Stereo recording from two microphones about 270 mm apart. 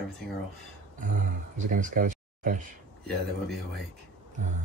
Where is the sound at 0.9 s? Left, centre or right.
Right.